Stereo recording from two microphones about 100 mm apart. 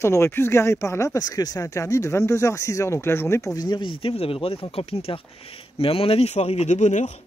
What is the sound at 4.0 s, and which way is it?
Speech, 70° left (ahead or behind).